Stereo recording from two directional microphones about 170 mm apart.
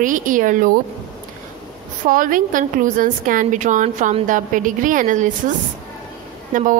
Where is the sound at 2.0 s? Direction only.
55° right (ahead or behind).